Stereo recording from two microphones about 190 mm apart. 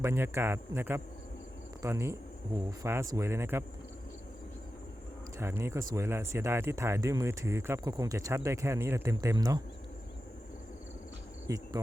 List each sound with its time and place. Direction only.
0.0 s speech: 15° right (ahead or behind)
5.4 s speech: 15° right (ahead or behind)
11.4 s insect: 20° right (ahead or behind)